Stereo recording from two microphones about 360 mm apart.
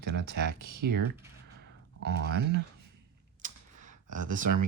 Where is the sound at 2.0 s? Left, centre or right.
Right.